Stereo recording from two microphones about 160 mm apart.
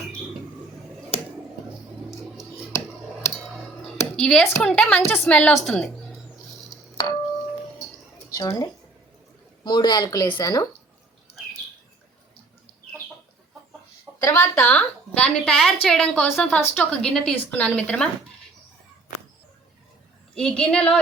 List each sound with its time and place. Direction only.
4.2 s a woman's voice: 5° left (ahead or behind)
6.9 s a sound: 25° left (ahead or behind)
8.3 s speech: 20° left (ahead or behind)
9.6 s speech: 25° left (ahead or behind)
14.3 s a woman's voice: 15° left (ahead or behind)
20.3 s a woman's voice: 5° left (ahead or behind)